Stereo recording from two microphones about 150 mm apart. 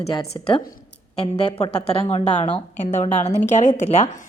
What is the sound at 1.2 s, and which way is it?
A woman's voice, 40° left (ahead or behind).